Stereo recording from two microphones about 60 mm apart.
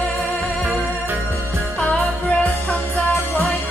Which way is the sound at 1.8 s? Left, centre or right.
Left.